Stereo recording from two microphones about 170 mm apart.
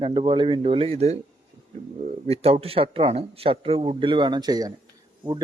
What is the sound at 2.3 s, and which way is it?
A man's voice, 35° right (ahead or behind).